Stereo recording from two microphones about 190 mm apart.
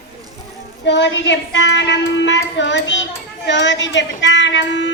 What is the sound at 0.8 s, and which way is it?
A woman's voice, 65° left (ahead or behind).